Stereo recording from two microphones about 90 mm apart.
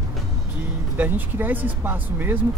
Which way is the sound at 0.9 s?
20° right (ahead or behind).